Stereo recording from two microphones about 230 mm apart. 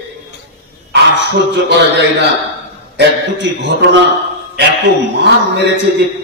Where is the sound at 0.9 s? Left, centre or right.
Right.